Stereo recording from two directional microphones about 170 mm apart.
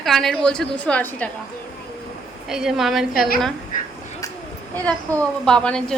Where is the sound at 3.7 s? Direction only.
55° left (ahead or behind).